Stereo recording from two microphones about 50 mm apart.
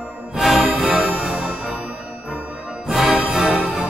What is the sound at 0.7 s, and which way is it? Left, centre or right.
Music, centre.